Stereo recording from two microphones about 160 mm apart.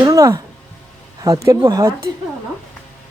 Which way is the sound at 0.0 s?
20° right (ahead or behind).